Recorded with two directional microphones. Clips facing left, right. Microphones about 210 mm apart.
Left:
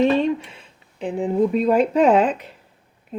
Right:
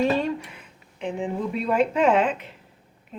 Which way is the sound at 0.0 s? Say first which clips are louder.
Left 5 dB; 20° left (ahead or behind).